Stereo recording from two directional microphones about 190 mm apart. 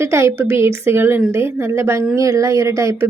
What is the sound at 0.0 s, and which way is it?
A woman's voice, 15° right (ahead or behind).